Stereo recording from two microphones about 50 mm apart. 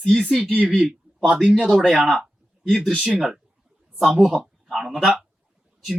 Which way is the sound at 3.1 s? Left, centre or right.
Centre.